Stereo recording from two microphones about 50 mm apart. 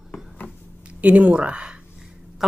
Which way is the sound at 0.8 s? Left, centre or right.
Right.